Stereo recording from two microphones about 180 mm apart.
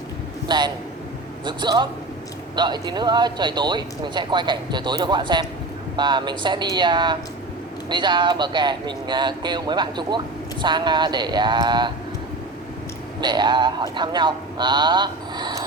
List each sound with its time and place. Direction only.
0.4 s a man's voice: 25° right (ahead or behind)
13.2 s speech: 25° right (ahead or behind)